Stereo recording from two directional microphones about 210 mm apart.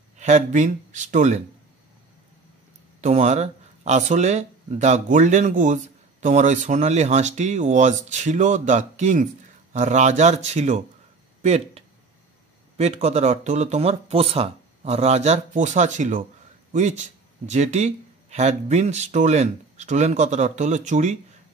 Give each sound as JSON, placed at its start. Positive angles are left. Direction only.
{"t": 0.2, "sound": "speech", "side_deg": -35}
{"t": 3.0, "sound": "speech", "side_deg": -30}